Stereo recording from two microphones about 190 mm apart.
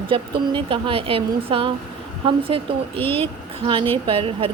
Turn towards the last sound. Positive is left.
turn(degrees=-30)  # may be behind; listen again after turning